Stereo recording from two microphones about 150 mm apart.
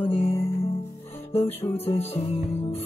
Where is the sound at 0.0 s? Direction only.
45° left (ahead or behind).